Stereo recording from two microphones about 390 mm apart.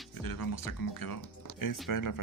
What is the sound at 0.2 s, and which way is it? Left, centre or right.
Speech, left.